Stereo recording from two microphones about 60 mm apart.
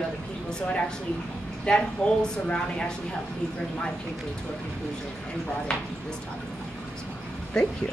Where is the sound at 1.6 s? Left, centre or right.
Centre.